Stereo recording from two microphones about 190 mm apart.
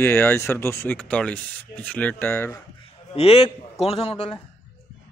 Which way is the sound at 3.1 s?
30° left (ahead or behind).